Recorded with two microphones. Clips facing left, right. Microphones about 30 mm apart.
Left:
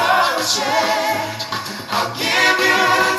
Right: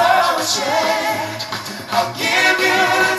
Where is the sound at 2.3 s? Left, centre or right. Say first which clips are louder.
Left 1 dB; left.